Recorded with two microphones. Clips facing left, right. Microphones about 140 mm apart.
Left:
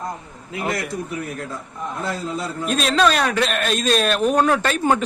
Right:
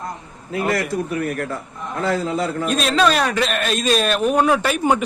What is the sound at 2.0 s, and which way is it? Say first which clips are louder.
Speech: right 7 dB; 90° right.